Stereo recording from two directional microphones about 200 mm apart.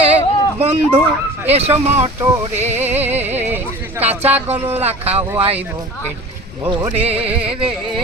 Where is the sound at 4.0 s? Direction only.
30° right (ahead or behind).